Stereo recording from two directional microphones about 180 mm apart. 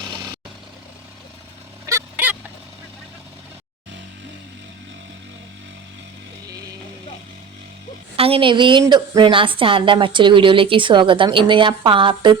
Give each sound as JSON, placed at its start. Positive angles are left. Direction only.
{"t": 1.9, "sound": "fowl", "side_deg": -10}
{"t": 8.1, "sound": "a woman's voice", "side_deg": -30}